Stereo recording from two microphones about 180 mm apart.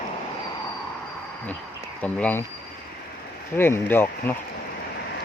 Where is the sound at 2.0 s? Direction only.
10° left (ahead or behind).